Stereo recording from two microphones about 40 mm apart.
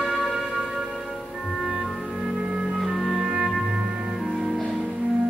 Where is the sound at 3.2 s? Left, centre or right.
Centre.